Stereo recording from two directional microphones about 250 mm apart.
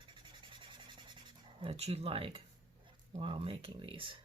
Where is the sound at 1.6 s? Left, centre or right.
Right.